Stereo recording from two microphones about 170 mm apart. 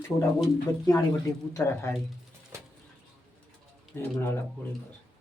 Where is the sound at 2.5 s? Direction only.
15° right (ahead or behind).